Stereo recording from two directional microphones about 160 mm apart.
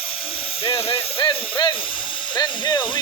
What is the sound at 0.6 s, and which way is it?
Hiss, 35° left (ahead or behind).